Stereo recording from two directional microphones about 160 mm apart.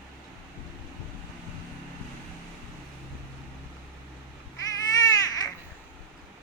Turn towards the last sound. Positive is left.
turn(degrees=25)  # may be behind; listen again after turning